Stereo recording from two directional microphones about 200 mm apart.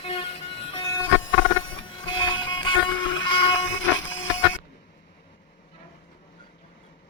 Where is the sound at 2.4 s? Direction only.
25° left (ahead or behind).